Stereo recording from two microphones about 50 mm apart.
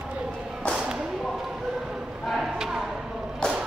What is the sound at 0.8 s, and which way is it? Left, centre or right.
Whip, centre.